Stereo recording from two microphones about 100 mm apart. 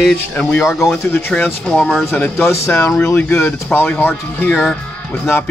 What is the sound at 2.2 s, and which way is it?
Speech, 25° left (ahead or behind).